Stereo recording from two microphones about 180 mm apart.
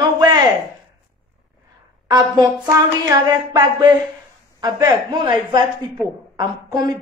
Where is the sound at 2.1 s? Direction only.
20° right (ahead or behind).